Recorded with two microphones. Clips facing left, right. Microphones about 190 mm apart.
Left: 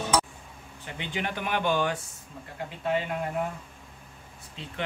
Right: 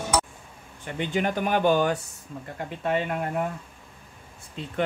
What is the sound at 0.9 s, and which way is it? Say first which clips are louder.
Speech: right 7 dB; 45° right (ahead or behind).